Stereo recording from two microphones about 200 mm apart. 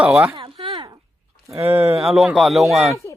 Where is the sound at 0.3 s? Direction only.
25° right (ahead or behind).